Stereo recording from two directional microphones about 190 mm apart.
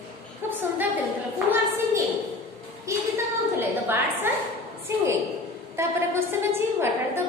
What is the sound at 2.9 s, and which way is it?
A woman's voice, 15° right (ahead or behind).